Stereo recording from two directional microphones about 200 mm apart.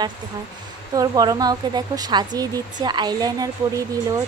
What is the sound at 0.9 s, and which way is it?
Speech, 20° right (ahead or behind).